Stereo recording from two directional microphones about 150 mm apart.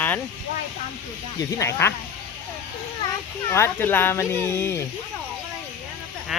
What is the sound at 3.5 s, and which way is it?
Speech, 15° left (ahead or behind).